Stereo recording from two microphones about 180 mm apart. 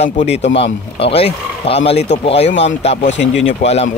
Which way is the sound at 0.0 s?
35° left (ahead or behind).